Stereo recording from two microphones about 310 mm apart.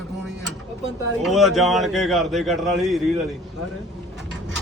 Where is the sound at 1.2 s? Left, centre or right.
Centre.